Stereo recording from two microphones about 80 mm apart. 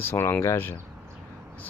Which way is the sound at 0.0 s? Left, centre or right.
Left.